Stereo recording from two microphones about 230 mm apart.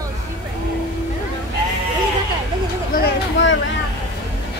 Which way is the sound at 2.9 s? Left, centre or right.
Left.